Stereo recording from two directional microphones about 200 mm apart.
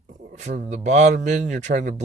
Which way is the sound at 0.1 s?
35° right (ahead or behind).